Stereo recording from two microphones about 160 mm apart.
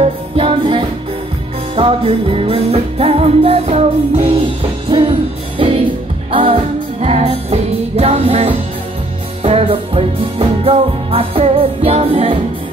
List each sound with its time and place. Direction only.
0.0 s music: 35° right (ahead or behind)